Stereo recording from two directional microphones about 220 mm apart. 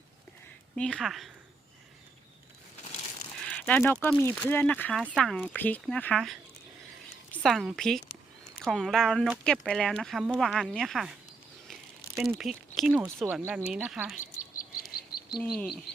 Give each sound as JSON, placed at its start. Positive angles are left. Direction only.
{"t": 0.8, "sound": "speech", "side_deg": 5}
{"t": 3.4, "sound": "a sound", "side_deg": 5}
{"t": 4.0, "sound": "speech", "side_deg": 10}
{"t": 7.4, "sound": "speech", "side_deg": 0}
{"t": 11.7, "sound": "a sound", "side_deg": 0}
{"t": 12.4, "sound": "speech", "side_deg": 0}
{"t": 14.2, "sound": "bird", "side_deg": 35}
{"t": 15.4, "sound": "speech", "side_deg": 0}